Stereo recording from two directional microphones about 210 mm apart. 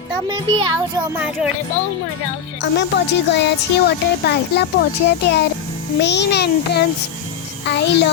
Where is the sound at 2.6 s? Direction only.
55° left (ahead or behind).